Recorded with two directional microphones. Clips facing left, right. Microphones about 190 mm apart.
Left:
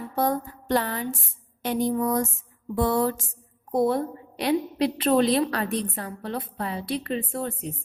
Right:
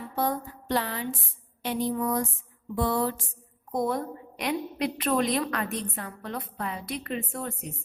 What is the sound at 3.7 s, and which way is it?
A woman's voice, 30° left (ahead or behind).